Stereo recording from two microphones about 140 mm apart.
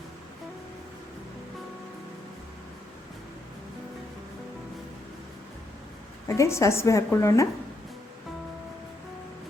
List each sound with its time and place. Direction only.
6.2 s a woman's voice: 20° left (ahead or behind)